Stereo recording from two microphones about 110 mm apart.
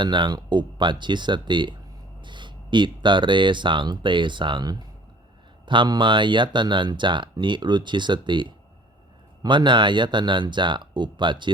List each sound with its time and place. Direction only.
0.0 s speech: 45° right (ahead or behind)